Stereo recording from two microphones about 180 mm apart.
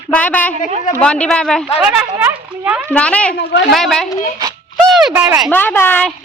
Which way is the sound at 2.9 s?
5° left (ahead or behind).